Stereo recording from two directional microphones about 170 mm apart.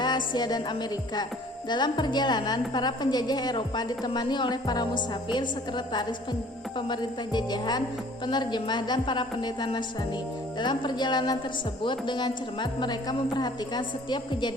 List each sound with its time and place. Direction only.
0.0 s music: 25° left (ahead or behind)
1.7 s a woman's voice: 25° left (ahead or behind)